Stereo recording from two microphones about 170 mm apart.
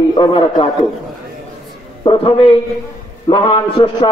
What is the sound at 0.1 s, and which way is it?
Speech, 30° left (ahead or behind).